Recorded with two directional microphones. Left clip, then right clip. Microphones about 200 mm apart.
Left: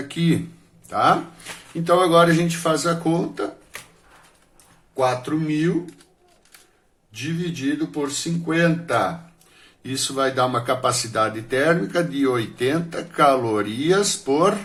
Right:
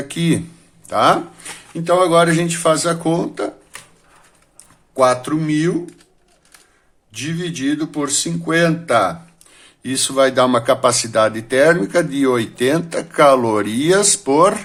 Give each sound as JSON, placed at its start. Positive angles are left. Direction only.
{"t": 0.1, "sound": "speech", "side_deg": -35}
{"t": 1.8, "sound": "speech", "side_deg": -20}
{"t": 4.9, "sound": "a sound", "side_deg": -40}
{"t": 7.1, "sound": "speech", "side_deg": -40}